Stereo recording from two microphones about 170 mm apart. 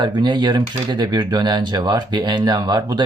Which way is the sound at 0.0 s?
25° right (ahead or behind).